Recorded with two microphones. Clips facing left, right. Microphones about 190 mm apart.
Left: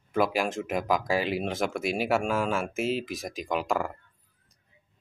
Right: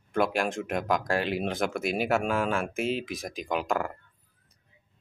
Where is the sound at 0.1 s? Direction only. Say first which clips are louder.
Left 1 dB; centre (ahead or behind).